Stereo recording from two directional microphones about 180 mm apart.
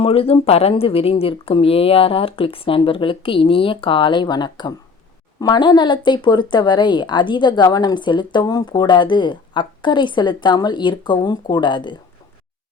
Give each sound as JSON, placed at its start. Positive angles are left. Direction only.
{"t": 0.0, "sound": "speech", "side_deg": 35}